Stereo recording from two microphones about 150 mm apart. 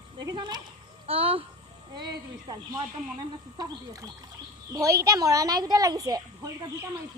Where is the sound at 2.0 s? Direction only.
25° right (ahead or behind).